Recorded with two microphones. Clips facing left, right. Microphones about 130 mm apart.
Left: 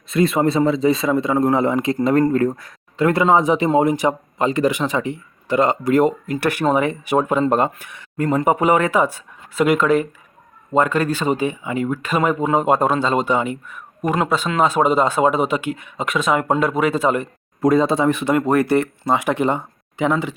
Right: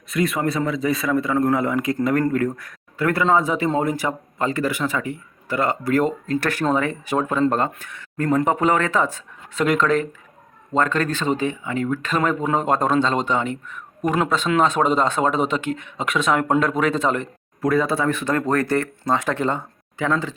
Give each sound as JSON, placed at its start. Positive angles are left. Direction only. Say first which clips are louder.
{"t": 0.1, "sound": "speech", "louder": "left 5 dB", "side_deg": 30}
{"t": 17.6, "sound": "speech", "louder": "left 4 dB", "side_deg": 20}